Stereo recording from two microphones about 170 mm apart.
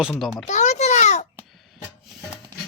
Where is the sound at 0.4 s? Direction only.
45° left (ahead or behind).